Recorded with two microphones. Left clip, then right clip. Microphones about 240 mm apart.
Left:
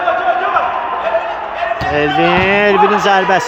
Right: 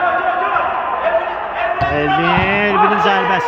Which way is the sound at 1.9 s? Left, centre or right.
Centre.